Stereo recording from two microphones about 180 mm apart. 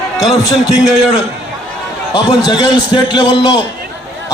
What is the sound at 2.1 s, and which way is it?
Speech, 25° left (ahead or behind).